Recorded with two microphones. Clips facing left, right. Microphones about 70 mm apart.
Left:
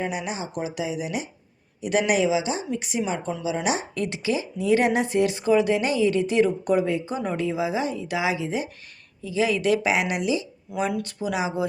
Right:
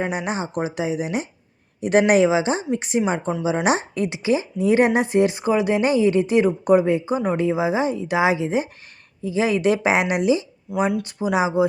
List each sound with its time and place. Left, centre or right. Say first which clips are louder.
0.0 s speech: right 4 dB; right
3.9 s speech: right 4 dB; centre
4.3 s speech: right 3 dB; right